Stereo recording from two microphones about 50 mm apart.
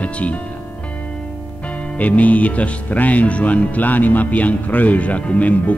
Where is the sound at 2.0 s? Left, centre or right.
Left.